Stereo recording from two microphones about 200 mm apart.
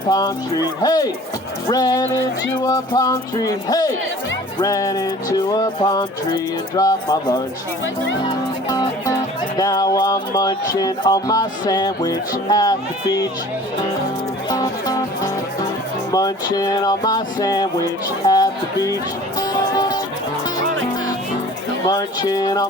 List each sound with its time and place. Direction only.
0.1 s music: 20° left (ahead or behind)
4.6 s speech: 15° left (ahead or behind)
5.5 s music: 20° left (ahead or behind)
14.5 s music: 20° left (ahead or behind)
18.3 s speech: 20° left (ahead or behind)
19.4 s music: 20° left (ahead or behind)
21.8 s music: 20° left (ahead or behind)